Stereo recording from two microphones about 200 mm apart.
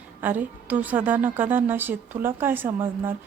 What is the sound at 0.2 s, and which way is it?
A woman's voice, 10° right (ahead or behind).